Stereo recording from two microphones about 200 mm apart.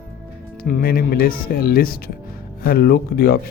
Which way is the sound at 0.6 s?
45° left (ahead or behind).